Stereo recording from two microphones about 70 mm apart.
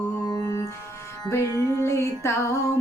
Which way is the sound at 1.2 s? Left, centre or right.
Left.